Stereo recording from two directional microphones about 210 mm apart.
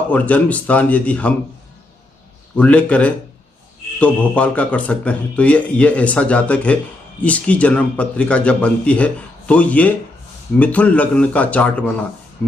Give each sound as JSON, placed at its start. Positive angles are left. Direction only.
{"t": 0.1, "sound": "a man's voice", "side_deg": 5}
{"t": 2.5, "sound": "a man's voice", "side_deg": 5}